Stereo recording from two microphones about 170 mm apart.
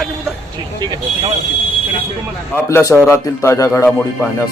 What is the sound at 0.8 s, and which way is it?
Speech, 25° right (ahead or behind).